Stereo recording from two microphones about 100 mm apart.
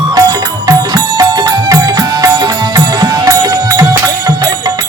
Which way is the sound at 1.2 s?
40° right (ahead or behind).